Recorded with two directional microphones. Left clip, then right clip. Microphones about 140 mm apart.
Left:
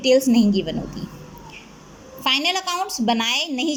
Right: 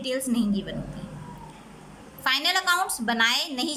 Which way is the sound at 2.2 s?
20° left (ahead or behind).